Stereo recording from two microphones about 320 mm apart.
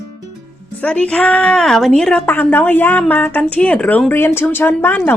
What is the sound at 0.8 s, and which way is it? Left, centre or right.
A woman's voice, centre.